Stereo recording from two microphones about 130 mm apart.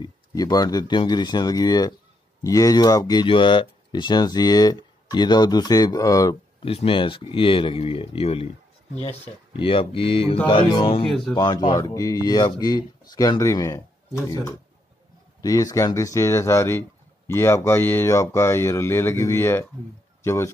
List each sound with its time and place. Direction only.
0.0 s speech: 30° left (ahead or behind)
6.6 s speech: 45° left (ahead or behind)
9.5 s speech: 40° left (ahead or behind)
11.1 s speech: 5° left (ahead or behind)
11.3 s speech: 30° left (ahead or behind)